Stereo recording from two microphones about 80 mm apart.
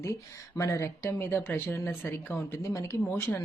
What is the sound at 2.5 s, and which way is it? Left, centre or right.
Speech, left.